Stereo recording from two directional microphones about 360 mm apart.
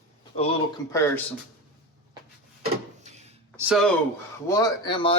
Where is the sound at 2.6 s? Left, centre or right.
Centre.